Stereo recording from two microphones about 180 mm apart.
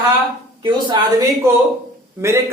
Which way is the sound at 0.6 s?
25° right (ahead or behind).